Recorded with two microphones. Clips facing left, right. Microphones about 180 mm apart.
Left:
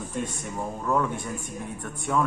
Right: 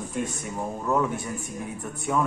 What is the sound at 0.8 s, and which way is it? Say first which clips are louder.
A woman's voice: right 1 dB; 5° right (ahead or behind).